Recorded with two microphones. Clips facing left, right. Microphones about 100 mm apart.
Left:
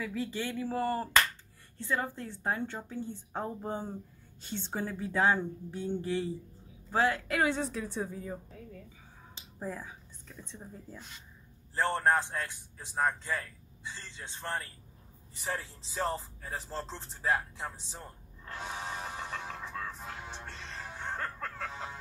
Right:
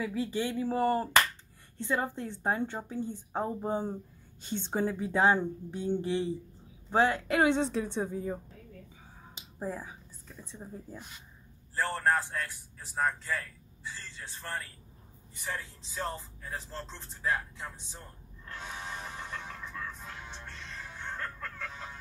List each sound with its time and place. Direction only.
0.0 s a woman's voice: 15° right (ahead or behind)
9.3 s a sound: 15° right (ahead or behind)
10.2 s a woman's voice: 5° right (ahead or behind)
11.7 s a man's voice: 25° left (ahead or behind)
15.4 s speech: 40° left (ahead or behind)
20.5 s music: 30° left (ahead or behind)